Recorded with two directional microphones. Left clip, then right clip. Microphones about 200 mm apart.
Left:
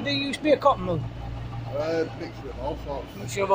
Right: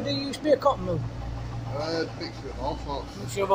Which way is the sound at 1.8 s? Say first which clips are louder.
Left 2 dB; 50° left (ahead or behind).